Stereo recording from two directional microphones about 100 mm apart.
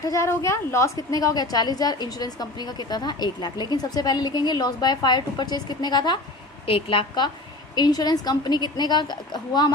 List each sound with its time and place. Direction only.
0.0 s a woman's voice: 30° left (ahead or behind)
6.7 s a woman's voice: 65° left (ahead or behind)
7.8 s a woman's voice: 45° left (ahead or behind)